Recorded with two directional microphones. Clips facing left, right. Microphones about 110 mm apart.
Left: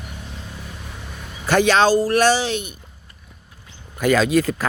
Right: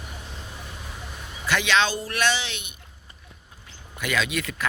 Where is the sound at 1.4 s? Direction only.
40° left (ahead or behind).